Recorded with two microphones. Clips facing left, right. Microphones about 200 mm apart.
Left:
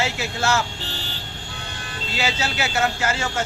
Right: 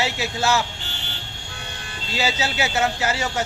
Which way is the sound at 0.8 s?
35° left (ahead or behind).